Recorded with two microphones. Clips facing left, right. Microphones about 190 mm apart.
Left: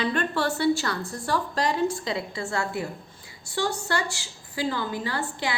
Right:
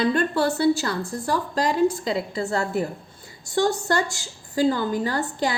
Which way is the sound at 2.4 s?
35° right (ahead or behind).